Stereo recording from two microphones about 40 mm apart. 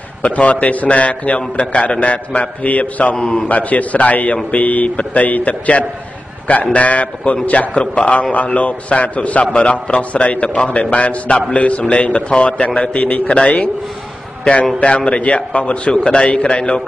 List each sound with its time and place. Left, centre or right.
0.2 s a man's voice: left
3.2 s a man's voice: centre
3.4 s a man's voice: left
7.7 s a man's voice: left
14.4 s a man's voice: left